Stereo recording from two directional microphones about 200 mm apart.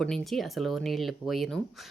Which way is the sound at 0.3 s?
Centre (ahead or behind).